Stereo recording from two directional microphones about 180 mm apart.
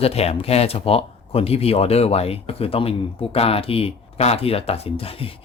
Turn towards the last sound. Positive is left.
turn(degrees=30)  # may be behind; listen again after turning